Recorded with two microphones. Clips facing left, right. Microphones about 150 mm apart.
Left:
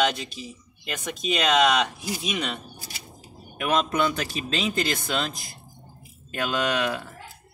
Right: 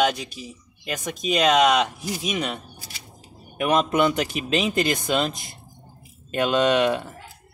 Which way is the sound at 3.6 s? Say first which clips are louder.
Right 4 dB; 20° right (ahead or behind).